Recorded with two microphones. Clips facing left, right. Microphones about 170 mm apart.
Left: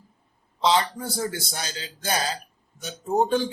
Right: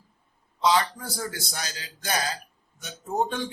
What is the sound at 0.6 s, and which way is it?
A man's voice, 25° left (ahead or behind).